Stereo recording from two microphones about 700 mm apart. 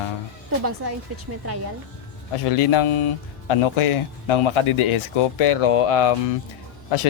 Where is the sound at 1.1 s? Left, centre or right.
Centre.